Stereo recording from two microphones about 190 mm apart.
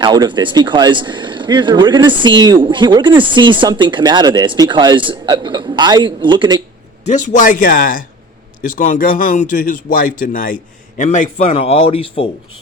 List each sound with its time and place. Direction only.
0.0 s speech: 20° right (ahead or behind)
7.0 s a man's voice: 40° left (ahead or behind)